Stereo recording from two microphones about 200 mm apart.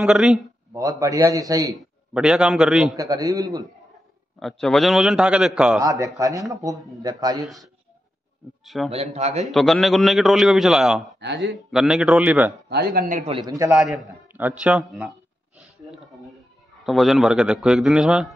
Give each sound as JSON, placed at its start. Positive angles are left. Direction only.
{"t": 0.0, "sound": "a man's voice", "side_deg": 0}
{"t": 0.7, "sound": "a man's voice", "side_deg": -15}
{"t": 1.8, "sound": "a man's voice", "side_deg": -5}
{"t": 3.0, "sound": "a man's voice", "side_deg": -15}
{"t": 4.4, "sound": "a man's voice", "side_deg": 0}
{"t": 5.8, "sound": "a man's voice", "side_deg": -15}
{"t": 7.4, "sound": "a man's voice", "side_deg": 0}
{"t": 8.9, "sound": "a man's voice", "side_deg": -30}
{"t": 9.5, "sound": "a man's voice", "side_deg": 0}
{"t": 11.1, "sound": "speech", "side_deg": -60}
{"t": 11.7, "sound": "a man's voice", "side_deg": -5}
{"t": 12.6, "sound": "speech", "side_deg": -50}
{"t": 13.2, "sound": "a man's voice", "side_deg": -25}
{"t": 16.8, "sound": "a man's voice", "side_deg": 0}